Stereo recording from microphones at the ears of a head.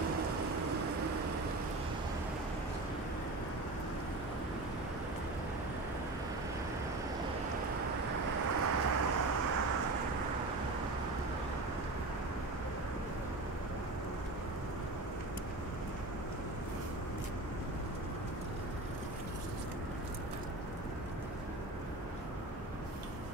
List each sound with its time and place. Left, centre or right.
0.0 s vehicle: right
7.8 s vehicle: right